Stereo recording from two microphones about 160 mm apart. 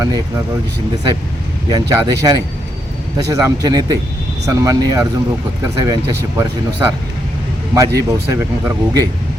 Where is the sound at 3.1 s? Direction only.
20° right (ahead or behind).